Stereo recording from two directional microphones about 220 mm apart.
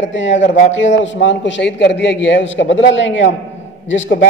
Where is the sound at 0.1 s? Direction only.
50° left (ahead or behind).